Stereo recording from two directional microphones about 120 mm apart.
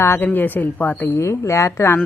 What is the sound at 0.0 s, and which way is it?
Speech, 15° left (ahead or behind).